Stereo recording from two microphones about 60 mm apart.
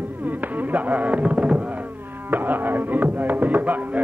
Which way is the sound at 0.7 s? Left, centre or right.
Right.